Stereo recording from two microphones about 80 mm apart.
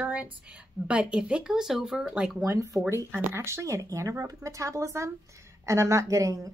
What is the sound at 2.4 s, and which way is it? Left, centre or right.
A woman's voice, right.